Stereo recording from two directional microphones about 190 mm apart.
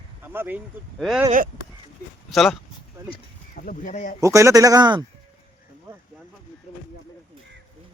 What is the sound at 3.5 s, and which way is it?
Speech, 45° left (ahead or behind).